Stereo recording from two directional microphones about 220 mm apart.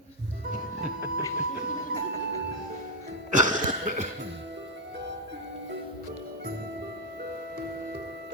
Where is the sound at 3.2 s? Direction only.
35° right (ahead or behind).